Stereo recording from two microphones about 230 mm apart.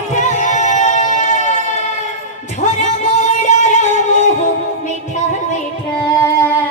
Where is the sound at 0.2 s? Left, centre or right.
Left.